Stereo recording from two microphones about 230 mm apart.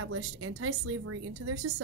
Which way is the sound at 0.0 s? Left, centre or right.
Right.